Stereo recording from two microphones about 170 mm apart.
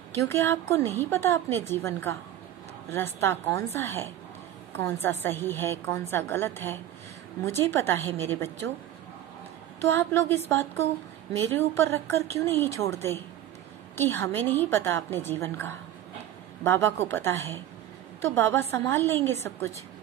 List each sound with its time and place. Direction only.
0.2 s a woman's voice: 15° left (ahead or behind)
9.8 s a woman's voice: 15° left (ahead or behind)